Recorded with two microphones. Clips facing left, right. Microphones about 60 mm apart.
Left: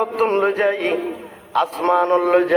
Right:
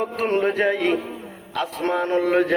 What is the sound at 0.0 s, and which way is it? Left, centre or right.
A man's voice, left.